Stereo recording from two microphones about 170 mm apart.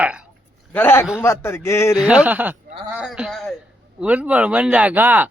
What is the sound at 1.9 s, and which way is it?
Speech, 5° right (ahead or behind).